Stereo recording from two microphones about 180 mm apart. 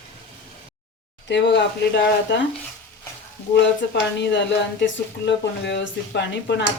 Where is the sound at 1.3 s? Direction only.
70° left (ahead or behind).